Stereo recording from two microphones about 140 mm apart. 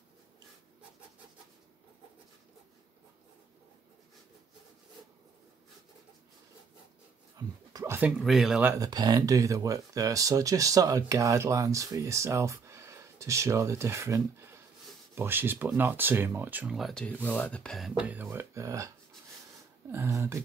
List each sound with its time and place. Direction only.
7.3 s dog: 25° right (ahead or behind)
8.2 s speech: centre (ahead or behind)
8.6 s speech: 25° right (ahead or behind)
16.7 s speech: 5° left (ahead or behind)
18.0 s speech: 15° right (ahead or behind)
19.9 s speech: 20° right (ahead or behind)